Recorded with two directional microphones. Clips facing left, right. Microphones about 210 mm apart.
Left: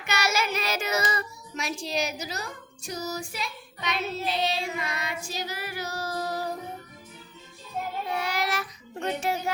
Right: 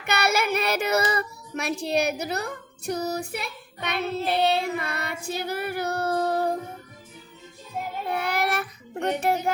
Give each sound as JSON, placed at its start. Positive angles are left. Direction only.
{"t": 0.0, "sound": "child singing", "side_deg": -60}
{"t": 8.1, "sound": "child singing", "side_deg": -55}